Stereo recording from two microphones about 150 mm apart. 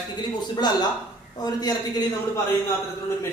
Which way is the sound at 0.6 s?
25° left (ahead or behind).